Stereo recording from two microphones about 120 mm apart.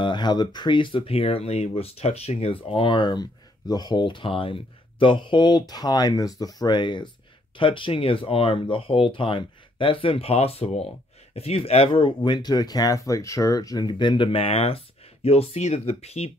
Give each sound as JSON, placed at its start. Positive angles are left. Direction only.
{"t": 0.0, "sound": "speech", "side_deg": 40}